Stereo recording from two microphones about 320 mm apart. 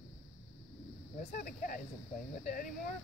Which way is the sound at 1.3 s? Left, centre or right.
Left.